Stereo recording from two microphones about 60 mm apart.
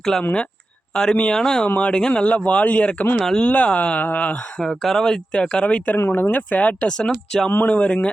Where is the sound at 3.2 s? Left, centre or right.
Centre.